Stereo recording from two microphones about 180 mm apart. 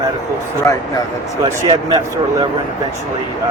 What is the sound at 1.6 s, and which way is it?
Speech, 25° right (ahead or behind).